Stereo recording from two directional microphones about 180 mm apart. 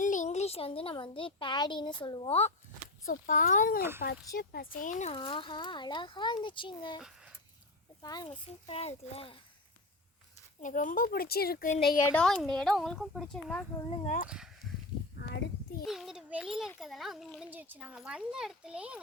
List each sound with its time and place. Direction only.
0.0 s speech: 45° left (ahead or behind)
3.1 s speech: 50° left (ahead or behind)
5.1 s speech: 30° left (ahead or behind)
8.0 s speech: 20° left (ahead or behind)
8.4 s a child's voice: 35° left (ahead or behind)
10.6 s speech: 45° left (ahead or behind)
12.1 s a child's voice: centre (ahead or behind)
14.0 s speech: 45° left (ahead or behind)
14.3 s a child's voice: 5° right (ahead or behind)
15.2 s a sound: 65° left (ahead or behind)
15.8 s a child's voice: centre (ahead or behind)